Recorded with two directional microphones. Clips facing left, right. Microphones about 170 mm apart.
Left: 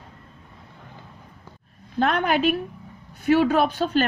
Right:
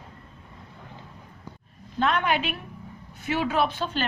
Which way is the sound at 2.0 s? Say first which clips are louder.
Left 3 dB; 45° left (ahead or behind).